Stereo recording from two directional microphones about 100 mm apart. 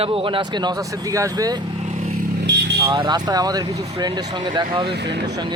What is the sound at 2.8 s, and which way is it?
Speech, 45° right (ahead or behind).